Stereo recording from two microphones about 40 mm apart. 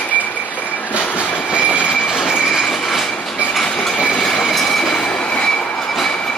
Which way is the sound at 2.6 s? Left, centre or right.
Centre.